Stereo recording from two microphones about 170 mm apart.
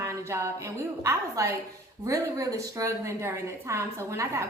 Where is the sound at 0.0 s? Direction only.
15° right (ahead or behind).